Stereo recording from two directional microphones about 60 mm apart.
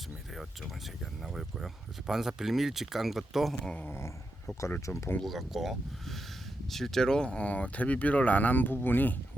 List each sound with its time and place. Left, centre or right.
1.2 s speech: centre
3.8 s speech: left
5.2 s speech: centre; by 9.1 s left